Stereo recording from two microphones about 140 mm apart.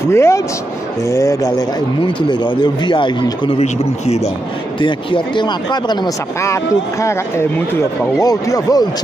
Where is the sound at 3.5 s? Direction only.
50° left (ahead or behind).